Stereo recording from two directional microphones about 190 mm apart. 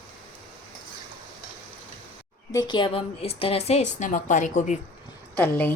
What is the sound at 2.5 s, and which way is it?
A woman's voice, 20° left (ahead or behind).